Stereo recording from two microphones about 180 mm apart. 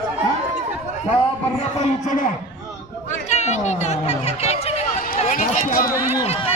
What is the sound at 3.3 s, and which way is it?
Speech, 40° left (ahead or behind).